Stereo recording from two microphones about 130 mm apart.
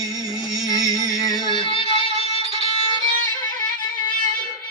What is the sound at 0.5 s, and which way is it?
Music, 30° left (ahead or behind).